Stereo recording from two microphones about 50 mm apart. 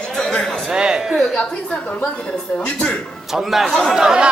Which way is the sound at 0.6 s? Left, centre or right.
Centre.